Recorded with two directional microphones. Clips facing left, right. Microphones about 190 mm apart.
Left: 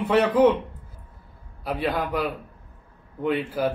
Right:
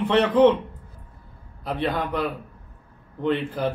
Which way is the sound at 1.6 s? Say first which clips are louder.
Even; 5° left (ahead or behind).